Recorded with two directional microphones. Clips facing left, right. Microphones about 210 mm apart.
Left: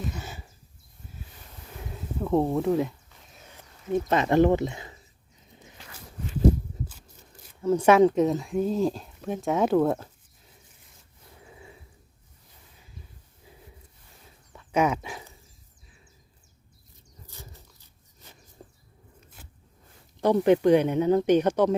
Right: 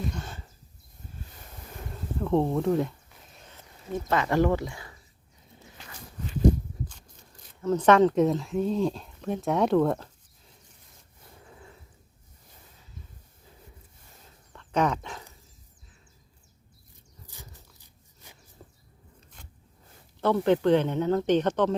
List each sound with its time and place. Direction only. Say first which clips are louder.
0.1 s speech: even; 5° left (ahead or behind)
1.9 s a sound: even; 5° left (ahead or behind)
3.9 s speech: left 4 dB; 20° left (ahead or behind)
7.6 s speech: left 1 dB; 10° left (ahead or behind)
11.4 s a sound: left 2 dB; 10° left (ahead or behind)
14.5 s dog: left 2 dB; 10° left (ahead or behind)
17.2 s a sound: left 2 dB; 15° right (ahead or behind)
19.4 s zipper: left 1 dB; 5° left (ahead or behind)
20.2 s speech: left 3 dB; 15° left (ahead or behind)